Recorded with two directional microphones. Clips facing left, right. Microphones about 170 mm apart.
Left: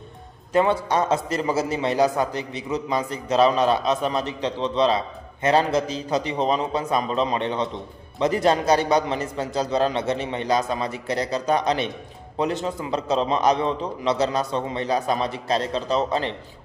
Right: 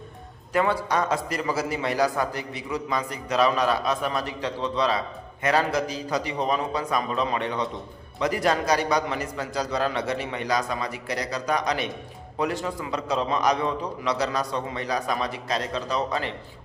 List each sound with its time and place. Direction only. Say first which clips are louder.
0.5 s a man's voice: left 3 dB; 25° left (ahead or behind)